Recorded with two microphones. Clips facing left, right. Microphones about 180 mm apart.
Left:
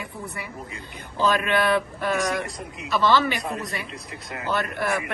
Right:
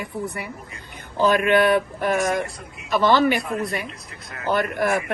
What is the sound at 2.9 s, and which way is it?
Speech, 50° right (ahead or behind).